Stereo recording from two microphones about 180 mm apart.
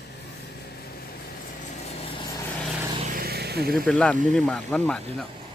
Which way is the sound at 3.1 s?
55° right (ahead or behind).